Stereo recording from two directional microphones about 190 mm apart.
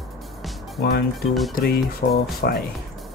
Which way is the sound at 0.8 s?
55° left (ahead or behind).